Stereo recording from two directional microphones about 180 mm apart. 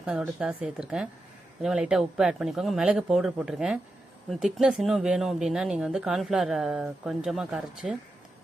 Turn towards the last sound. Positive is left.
turn(degrees=-5)  # may be behind; listen again after turning